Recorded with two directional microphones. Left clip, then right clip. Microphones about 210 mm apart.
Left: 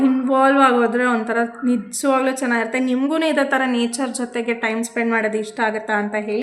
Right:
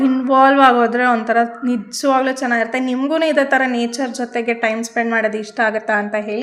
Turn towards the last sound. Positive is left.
turn(degrees=-10)  # may be behind; listen again after turning